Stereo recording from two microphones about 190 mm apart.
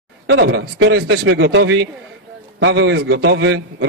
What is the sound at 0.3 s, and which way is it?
A man's voice, 70° right (ahead or behind).